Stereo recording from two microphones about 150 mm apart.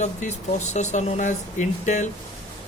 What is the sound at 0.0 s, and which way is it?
Speech, 50° left (ahead or behind).